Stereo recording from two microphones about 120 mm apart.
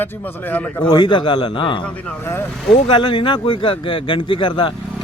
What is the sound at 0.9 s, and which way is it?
Speech, 40° left (ahead or behind).